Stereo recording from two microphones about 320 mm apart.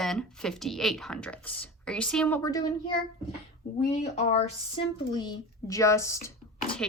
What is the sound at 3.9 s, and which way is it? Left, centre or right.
Speech, left.